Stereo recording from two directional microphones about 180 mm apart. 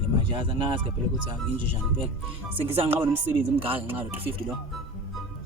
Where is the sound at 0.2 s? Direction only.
30° right (ahead or behind).